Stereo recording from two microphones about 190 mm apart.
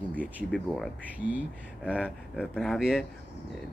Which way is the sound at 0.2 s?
5° right (ahead or behind).